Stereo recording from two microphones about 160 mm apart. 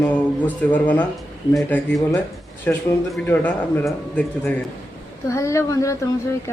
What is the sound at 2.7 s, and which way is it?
Speech, 15° left (ahead or behind).